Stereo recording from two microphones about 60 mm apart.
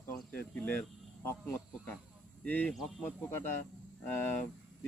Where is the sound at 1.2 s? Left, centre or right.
Left.